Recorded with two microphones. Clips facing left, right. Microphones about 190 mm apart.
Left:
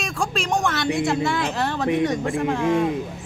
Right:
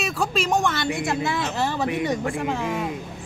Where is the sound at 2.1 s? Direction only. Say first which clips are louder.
Left 2 dB; 25° left (ahead or behind).